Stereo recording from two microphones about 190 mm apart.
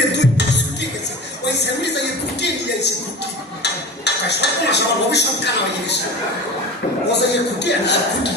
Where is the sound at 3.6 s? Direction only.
65° left (ahead or behind).